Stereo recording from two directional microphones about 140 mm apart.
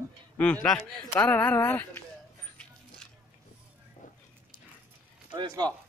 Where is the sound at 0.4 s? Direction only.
10° left (ahead or behind).